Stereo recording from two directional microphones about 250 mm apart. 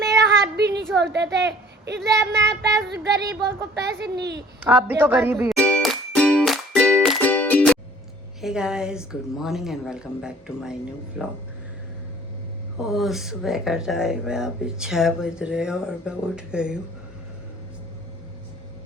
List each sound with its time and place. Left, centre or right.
0.5 s a sound: right
0.9 s a woman's voice: right
4.6 s speech: centre
5.5 s music: centre
8.4 s speech: centre
12.8 s speech: centre